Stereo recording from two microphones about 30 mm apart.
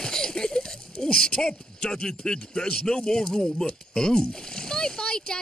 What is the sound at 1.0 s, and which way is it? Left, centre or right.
Speech, left.